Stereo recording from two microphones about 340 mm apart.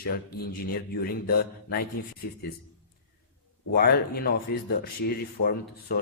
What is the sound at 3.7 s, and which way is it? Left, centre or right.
Speech, left.